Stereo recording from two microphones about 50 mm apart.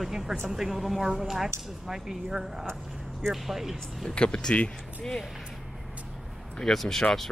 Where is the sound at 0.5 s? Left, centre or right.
Centre.